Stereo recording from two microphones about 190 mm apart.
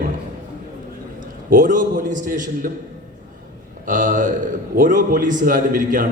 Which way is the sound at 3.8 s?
45° right (ahead or behind).